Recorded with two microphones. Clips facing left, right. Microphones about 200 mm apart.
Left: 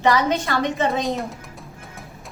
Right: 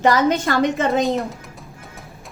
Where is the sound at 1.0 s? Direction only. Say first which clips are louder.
Right 4 dB; centre (ahead or behind).